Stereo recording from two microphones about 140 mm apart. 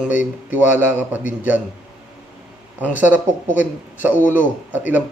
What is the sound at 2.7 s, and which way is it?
Speech, 10° right (ahead or behind).